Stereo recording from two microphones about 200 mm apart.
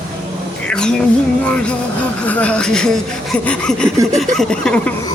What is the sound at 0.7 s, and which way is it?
Music, 5° left (ahead or behind).